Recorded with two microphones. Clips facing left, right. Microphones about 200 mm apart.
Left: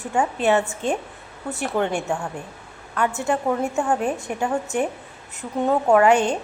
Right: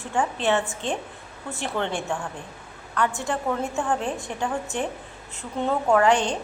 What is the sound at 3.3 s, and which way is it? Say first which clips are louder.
A woman's voice: left 4 dB; 10° left (ahead or behind).